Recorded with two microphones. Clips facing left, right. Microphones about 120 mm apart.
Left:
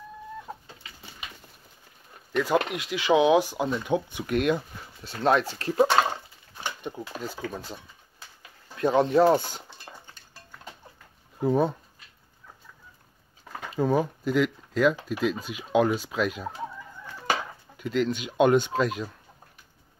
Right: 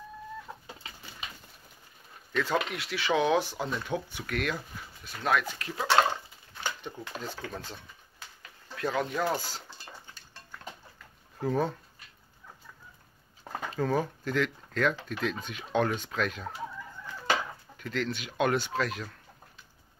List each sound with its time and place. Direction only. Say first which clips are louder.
2.3 s speech: left 5 dB; 15° left (ahead or behind); by 5.9 s 35° left (ahead or behind)
6.6 s speech: left 3 dB; 15° left (ahead or behind)
8.7 s speech: left 10 dB; 30° left (ahead or behind)
11.4 s speech: left 5 dB; 15° left (ahead or behind)
13.7 s speech: left 5 dB; 15° left (ahead or behind)
17.7 s speech: left 7 dB; 15° left (ahead or behind)